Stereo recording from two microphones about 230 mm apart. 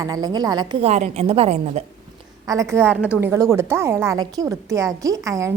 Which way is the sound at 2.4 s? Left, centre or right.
Centre.